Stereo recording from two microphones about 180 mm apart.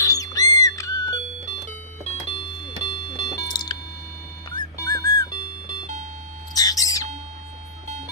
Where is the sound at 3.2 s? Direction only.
25° left (ahead or behind).